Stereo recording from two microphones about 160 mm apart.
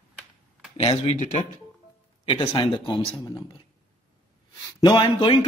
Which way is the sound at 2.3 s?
30° left (ahead or behind).